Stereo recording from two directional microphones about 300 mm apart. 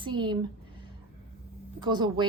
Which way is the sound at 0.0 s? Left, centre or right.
Centre.